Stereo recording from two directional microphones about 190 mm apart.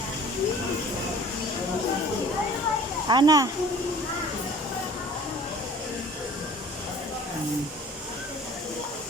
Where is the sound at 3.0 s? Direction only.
20° right (ahead or behind).